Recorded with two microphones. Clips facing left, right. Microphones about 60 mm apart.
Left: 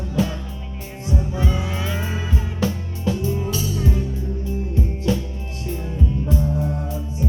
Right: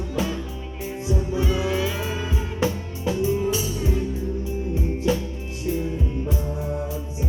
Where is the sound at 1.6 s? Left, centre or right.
Centre.